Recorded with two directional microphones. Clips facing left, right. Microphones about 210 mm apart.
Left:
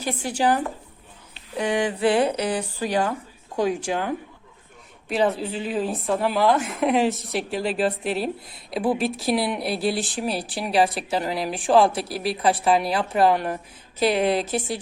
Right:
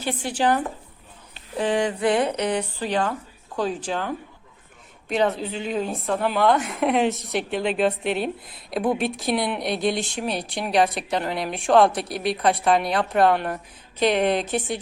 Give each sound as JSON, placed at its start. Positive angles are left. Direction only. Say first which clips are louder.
{"t": 0.0, "sound": "speech", "louder": "even", "side_deg": 40}
{"t": 0.3, "sound": "speech", "louder": "even", "side_deg": 10}
{"t": 2.0, "sound": "a sound", "louder": "left 2 dB", "side_deg": 30}
{"t": 2.8, "sound": "a woman's voice", "louder": "left 4 dB", "side_deg": 10}